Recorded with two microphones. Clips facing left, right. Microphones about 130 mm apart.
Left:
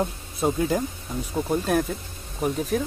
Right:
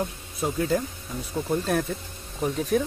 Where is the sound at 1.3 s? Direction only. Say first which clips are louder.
Left 2 dB; 15° left (ahead or behind).